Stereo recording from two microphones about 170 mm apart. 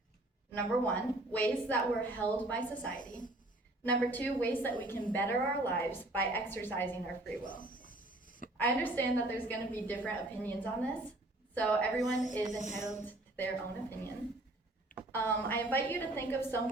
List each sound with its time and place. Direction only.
0.5 s a woman's voice: 10° left (ahead or behind)
3.0 s a woman's voice: 50° left (ahead or behind)
3.8 s a woman's voice: 10° left (ahead or behind)
7.4 s a sound: 55° left (ahead or behind)
8.5 s a woman's voice: 10° left (ahead or behind)
12.1 s a woman's voice: 45° left (ahead or behind)
13.1 s a sound: 10° left (ahead or behind)
15.1 s a woman's voice: 10° left (ahead or behind)